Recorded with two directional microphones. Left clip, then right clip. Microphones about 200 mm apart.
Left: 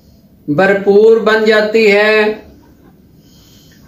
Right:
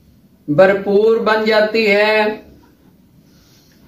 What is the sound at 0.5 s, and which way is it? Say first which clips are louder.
A man's voice: left 2 dB; 5° right (ahead or behind).